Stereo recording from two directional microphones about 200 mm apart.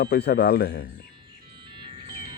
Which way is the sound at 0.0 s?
55° left (ahead or behind).